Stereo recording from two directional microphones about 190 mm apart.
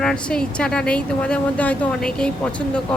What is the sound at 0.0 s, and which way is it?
Speech, 5° left (ahead or behind).